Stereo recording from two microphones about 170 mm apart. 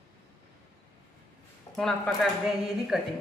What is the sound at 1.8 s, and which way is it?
A woman's voice, 5° left (ahead or behind).